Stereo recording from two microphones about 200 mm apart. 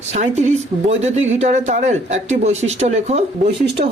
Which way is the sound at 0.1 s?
35° right (ahead or behind).